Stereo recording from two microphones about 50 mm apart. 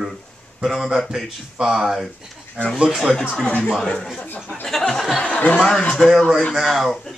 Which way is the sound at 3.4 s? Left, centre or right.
Left.